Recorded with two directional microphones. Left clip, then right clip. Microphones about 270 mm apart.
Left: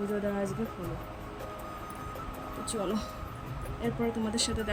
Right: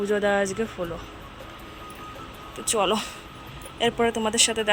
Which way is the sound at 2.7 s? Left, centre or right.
Centre.